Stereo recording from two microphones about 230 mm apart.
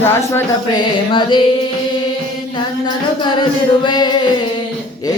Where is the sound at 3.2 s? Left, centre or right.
Centre.